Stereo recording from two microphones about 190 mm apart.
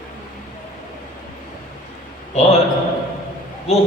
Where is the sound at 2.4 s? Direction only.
35° left (ahead or behind).